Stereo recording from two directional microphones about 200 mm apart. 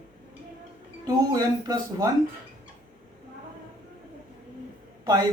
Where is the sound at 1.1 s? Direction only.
20° right (ahead or behind).